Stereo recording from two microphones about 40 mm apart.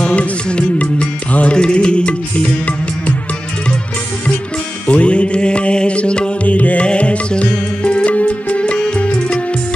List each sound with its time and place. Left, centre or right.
0.0 s music: left
4.8 s music: left
6.4 s music: left